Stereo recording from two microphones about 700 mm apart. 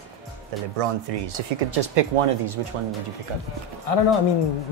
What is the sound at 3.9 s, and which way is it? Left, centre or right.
Speech, left.